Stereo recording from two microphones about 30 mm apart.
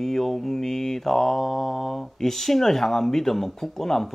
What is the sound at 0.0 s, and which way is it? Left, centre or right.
Speech, centre.